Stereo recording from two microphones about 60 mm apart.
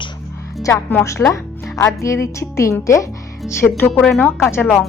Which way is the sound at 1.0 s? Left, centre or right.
Left.